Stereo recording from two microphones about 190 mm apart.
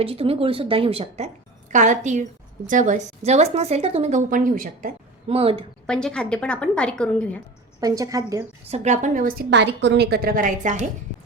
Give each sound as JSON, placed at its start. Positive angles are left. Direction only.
{"t": 0.0, "sound": "speech", "side_deg": -30}
{"t": 5.3, "sound": "speech", "side_deg": -30}
{"t": 5.8, "sound": "a woman's voice", "side_deg": 5}
{"t": 7.8, "sound": "a woman's voice", "side_deg": -20}
{"t": 8.7, "sound": "speech", "side_deg": -35}
{"t": 9.5, "sound": "a woman's voice", "side_deg": -65}